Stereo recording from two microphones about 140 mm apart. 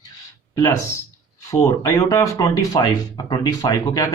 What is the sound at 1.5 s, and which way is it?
Speech, 20° left (ahead or behind).